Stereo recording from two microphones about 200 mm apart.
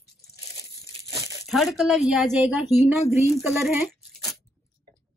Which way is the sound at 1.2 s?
15° right (ahead or behind).